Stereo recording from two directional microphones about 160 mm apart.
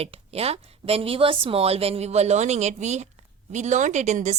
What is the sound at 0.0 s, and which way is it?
A woman's voice, 40° right (ahead or behind).